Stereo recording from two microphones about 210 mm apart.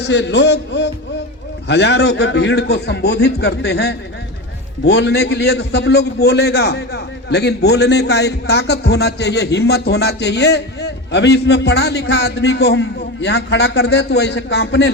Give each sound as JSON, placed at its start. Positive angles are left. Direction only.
{"t": 0.0, "sound": "a man's voice", "side_deg": 55}